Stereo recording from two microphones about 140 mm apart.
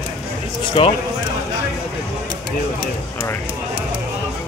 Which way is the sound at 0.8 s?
40° left (ahead or behind).